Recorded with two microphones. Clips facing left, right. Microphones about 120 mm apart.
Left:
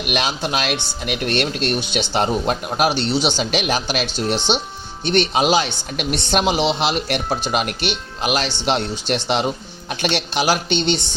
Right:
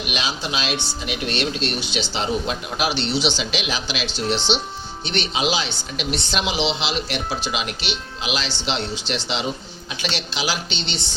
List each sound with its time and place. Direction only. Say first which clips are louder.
0.1 s speech: left 6 dB; 55° left (ahead or behind)